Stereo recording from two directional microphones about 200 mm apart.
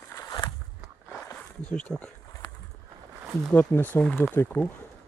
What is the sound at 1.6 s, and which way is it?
Speech, 5° left (ahead or behind).